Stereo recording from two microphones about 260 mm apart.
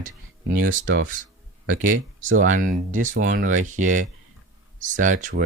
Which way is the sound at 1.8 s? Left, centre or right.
Right.